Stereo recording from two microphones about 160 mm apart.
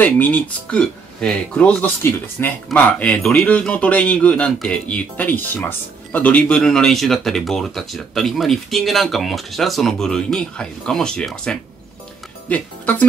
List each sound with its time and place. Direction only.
0.0 s speech: 10° left (ahead or behind)